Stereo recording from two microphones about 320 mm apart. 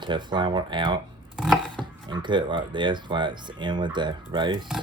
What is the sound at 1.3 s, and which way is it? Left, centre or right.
Chopping, centre.